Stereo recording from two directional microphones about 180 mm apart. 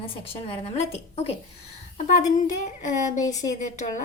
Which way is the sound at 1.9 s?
45° left (ahead or behind).